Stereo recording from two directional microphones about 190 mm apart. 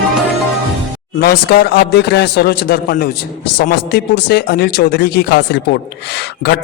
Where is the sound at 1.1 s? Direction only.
55° left (ahead or behind).